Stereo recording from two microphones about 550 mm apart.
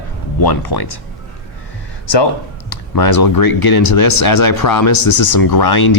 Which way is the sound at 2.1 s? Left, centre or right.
Left.